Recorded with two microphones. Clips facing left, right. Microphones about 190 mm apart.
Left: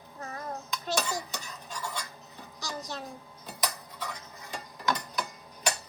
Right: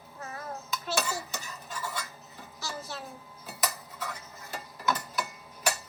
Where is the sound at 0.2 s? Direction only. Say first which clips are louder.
Left 1 dB; 35° left (ahead or behind).